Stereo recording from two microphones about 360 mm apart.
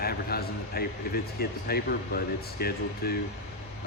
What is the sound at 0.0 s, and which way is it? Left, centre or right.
Speech, left.